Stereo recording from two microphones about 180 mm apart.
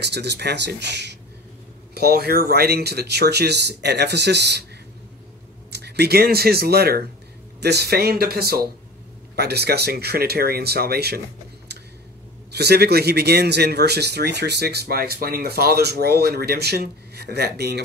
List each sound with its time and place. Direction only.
0.0 s speech: 70° right (ahead or behind)
5.7 s speech: 65° right (ahead or behind)
12.5 s speech: 65° right (ahead or behind)